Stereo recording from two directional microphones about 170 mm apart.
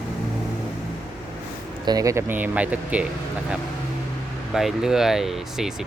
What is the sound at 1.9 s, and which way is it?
Speech, 20° right (ahead or behind).